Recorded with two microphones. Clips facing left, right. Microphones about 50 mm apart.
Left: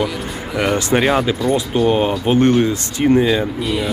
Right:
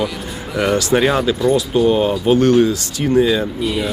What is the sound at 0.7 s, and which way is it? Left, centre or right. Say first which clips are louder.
Speech: right 2 dB; left.